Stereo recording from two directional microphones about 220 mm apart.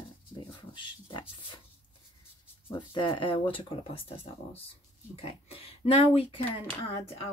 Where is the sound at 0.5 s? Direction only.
20° left (ahead or behind).